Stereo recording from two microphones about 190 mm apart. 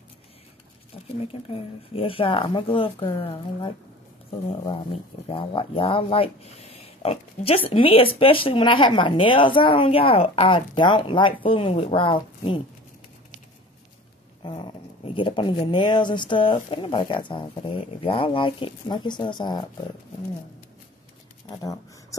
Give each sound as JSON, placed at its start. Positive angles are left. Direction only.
{"t": 1.2, "sound": "speech", "side_deg": 30}
{"t": 5.3, "sound": "speech", "side_deg": 25}
{"t": 14.4, "sound": "dog", "side_deg": 25}
{"t": 15.1, "sound": "speech", "side_deg": 25}